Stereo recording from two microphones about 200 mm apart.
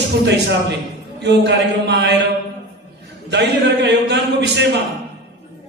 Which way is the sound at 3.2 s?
60° right (ahead or behind).